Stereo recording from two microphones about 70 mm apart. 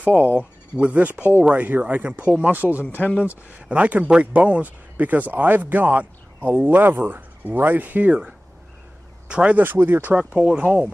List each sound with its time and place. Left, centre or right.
0.0 s speech: right
3.0 s speech: left
3.3 s speech: right
9.3 s speech: centre
9.6 s speech: right
10.1 s speech: centre